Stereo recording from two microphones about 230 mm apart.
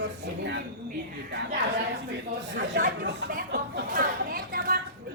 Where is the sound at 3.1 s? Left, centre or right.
Right.